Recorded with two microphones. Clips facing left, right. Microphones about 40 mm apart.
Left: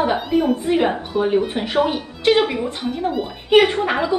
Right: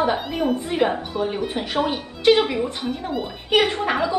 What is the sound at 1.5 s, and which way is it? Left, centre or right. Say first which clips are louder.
A woman's voice: left 4 dB; left.